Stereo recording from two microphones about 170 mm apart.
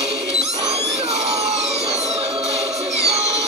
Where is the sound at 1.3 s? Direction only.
40° right (ahead or behind).